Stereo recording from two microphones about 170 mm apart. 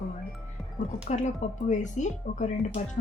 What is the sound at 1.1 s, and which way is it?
Speech, 45° left (ahead or behind).